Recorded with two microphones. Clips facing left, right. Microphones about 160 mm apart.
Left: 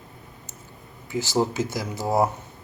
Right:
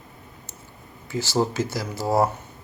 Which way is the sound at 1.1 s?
15° left (ahead or behind).